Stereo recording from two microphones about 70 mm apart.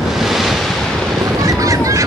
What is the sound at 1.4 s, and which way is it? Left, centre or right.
Honk, right.